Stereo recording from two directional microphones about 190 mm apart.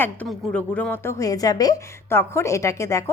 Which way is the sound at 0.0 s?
5° left (ahead or behind).